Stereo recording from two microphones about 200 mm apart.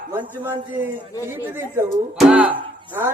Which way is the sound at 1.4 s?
10° right (ahead or behind).